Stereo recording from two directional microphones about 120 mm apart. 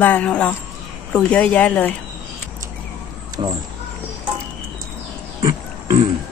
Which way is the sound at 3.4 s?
45° right (ahead or behind).